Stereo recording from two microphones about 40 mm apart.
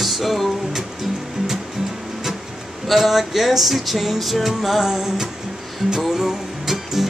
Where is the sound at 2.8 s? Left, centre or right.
Centre.